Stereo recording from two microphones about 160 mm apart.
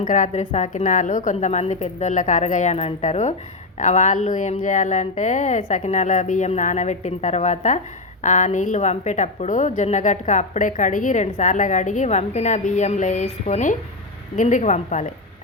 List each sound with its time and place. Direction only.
0.0 s a woman's voice: 50° left (ahead or behind)